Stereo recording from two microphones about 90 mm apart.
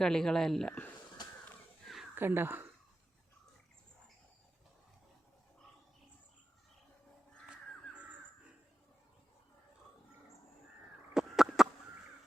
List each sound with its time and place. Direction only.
0.0 s speech: 5° left (ahead or behind)
2.1 s speech: 25° right (ahead or behind)
11.1 s a sound: 5° right (ahead or behind)